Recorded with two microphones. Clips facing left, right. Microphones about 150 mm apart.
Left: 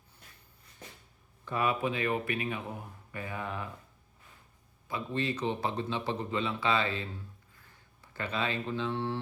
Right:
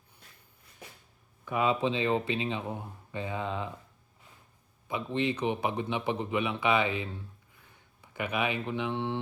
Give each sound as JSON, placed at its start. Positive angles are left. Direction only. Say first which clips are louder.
{"t": 1.5, "sound": "speech", "louder": "right 3 dB", "side_deg": -20}
{"t": 4.9, "sound": "a man's voice", "louder": "right 3 dB", "side_deg": -20}